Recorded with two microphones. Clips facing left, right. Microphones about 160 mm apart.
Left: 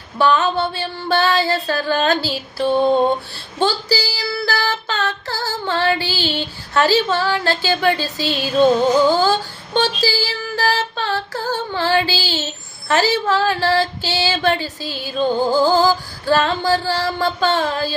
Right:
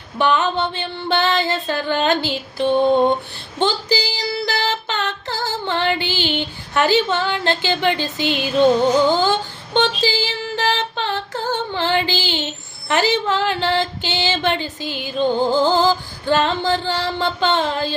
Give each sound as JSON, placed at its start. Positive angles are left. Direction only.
{"t": 0.2, "sound": "female singing", "side_deg": -20}